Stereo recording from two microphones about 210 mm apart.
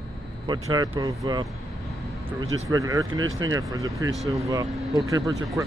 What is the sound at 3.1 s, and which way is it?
Speech, 70° right (ahead or behind).